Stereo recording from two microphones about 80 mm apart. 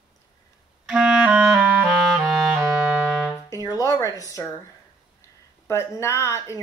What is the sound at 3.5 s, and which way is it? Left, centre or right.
Speech, left.